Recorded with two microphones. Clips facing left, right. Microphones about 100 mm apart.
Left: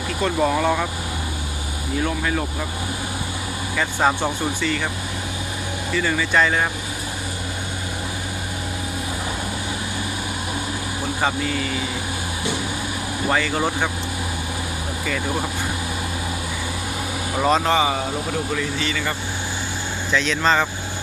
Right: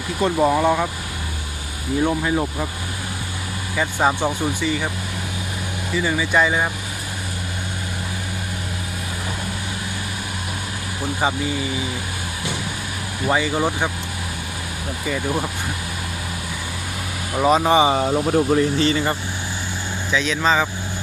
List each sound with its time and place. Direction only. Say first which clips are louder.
0.2 s speech: right 3 dB; 15° right (ahead or behind)
2.0 s speech: right 4 dB; 20° right (ahead or behind)
3.8 s speech: right 1 dB; 10° right (ahead or behind)
5.9 s speech: right 1 dB; 10° right (ahead or behind)
11.2 s speech: right 1 dB; 10° right (ahead or behind)
13.3 s speech: right 2 dB; 10° right (ahead or behind)
17.3 s speech: right 3 dB; 5° right (ahead or behind)
17.8 s speech: right 5 dB; 35° right (ahead or behind)
20.1 s speech: even; 5° right (ahead or behind)